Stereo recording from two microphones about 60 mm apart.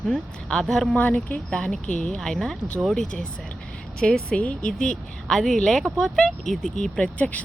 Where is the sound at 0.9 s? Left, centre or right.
Left.